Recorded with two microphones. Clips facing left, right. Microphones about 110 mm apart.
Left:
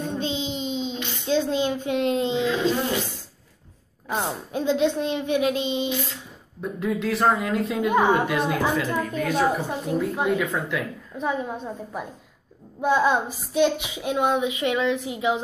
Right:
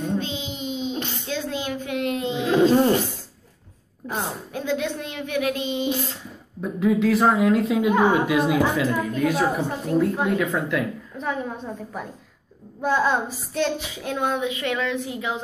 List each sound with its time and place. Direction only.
0.2 s child singing: 25° left (ahead or behind)
1.2 s speech: 25° left (ahead or behind)
2.4 s a sound: 40° right (ahead or behind)
4.1 s a woman's voice: 25° left (ahead or behind)
6.6 s speech: centre (ahead or behind)
12.8 s a woman's voice: 15° left (ahead or behind)